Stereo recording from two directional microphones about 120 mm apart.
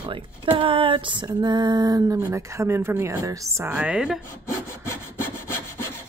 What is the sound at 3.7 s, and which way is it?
Speech, 10° right (ahead or behind).